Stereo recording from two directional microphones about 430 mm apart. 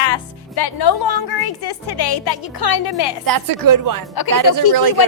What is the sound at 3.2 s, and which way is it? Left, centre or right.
Speech, right.